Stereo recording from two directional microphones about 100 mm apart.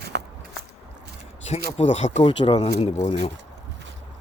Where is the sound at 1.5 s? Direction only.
90° left.